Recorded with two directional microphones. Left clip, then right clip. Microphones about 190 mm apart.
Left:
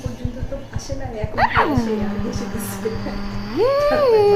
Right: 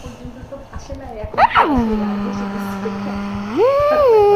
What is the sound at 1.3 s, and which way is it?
Speech, 25° right (ahead or behind).